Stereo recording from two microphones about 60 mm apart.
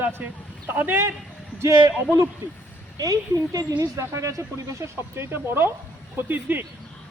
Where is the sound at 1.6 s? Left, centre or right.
Right.